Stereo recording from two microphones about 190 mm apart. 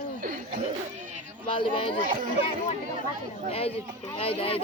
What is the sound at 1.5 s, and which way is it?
Speech, 25° left (ahead or behind).